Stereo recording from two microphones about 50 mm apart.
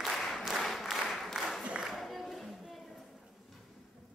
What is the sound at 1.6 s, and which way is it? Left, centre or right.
Music, centre.